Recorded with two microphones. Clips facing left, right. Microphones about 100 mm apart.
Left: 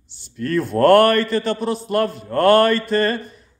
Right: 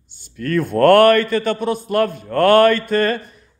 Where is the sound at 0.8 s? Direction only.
55° right (ahead or behind).